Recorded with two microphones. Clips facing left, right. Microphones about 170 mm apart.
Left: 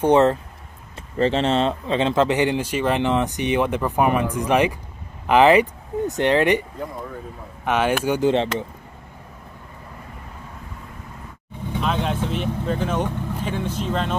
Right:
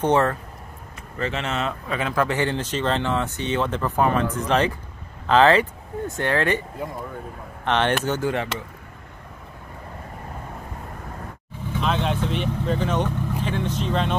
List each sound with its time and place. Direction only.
0.0 s speech: 20° left (ahead or behind)
1.1 s speech: 30° left (ahead or behind)
7.6 s speech: 10° left (ahead or behind)
8.3 s speech: 25° left (ahead or behind)
11.8 s speech: 5° left (ahead or behind)